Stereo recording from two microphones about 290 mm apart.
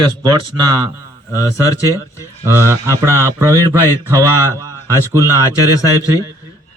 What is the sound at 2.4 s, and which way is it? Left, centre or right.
Speech, centre.